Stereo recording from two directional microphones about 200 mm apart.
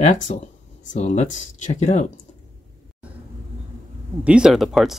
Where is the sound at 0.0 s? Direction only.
35° left (ahead or behind).